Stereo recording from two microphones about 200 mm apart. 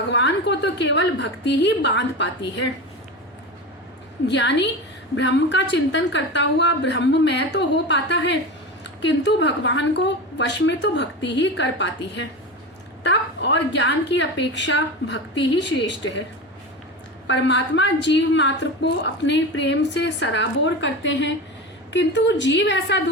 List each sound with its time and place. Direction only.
0.1 s a woman's voice: 60° left (ahead or behind)
4.3 s a woman's voice: 60° left (ahead or behind)
17.2 s a woman's voice: 65° left (ahead or behind)